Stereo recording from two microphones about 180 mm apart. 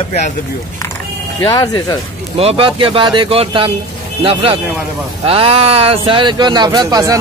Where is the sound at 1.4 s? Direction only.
20° left (ahead or behind).